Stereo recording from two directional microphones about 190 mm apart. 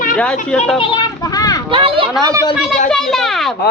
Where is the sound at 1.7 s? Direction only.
30° right (ahead or behind).